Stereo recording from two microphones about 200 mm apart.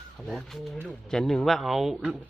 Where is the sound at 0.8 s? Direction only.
5° left (ahead or behind).